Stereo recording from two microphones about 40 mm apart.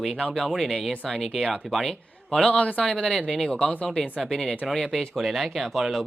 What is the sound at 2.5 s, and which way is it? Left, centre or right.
Speech, left.